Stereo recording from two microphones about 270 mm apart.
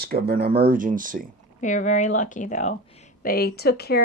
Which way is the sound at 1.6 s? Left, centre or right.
Left.